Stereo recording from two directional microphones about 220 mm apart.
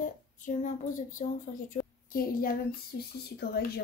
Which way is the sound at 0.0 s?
35° left (ahead or behind).